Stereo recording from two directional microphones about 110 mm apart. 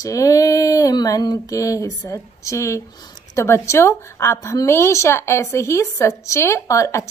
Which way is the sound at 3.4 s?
25° left (ahead or behind).